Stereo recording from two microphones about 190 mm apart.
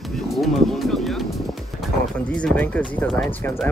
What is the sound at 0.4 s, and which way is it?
Speech, centre (ahead or behind).